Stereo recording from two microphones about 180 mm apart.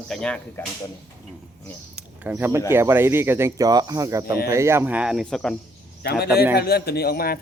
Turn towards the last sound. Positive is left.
turn(degrees=60)  # may be behind; listen again after turning